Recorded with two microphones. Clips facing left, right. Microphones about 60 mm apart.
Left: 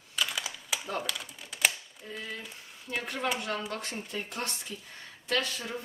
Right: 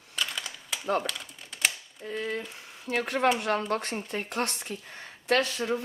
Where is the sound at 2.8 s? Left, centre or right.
Right.